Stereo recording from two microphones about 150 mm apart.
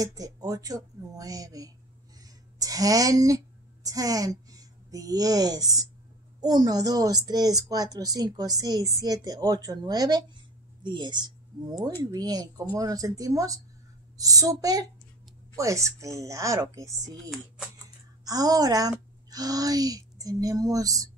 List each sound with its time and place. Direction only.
0.0 s a woman's voice: 25° right (ahead or behind)